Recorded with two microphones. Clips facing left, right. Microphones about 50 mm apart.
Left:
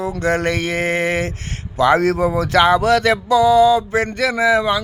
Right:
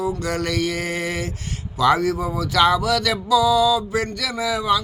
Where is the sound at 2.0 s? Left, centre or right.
Left.